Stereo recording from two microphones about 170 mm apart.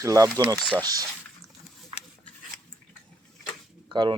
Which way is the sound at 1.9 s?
35° right (ahead or behind).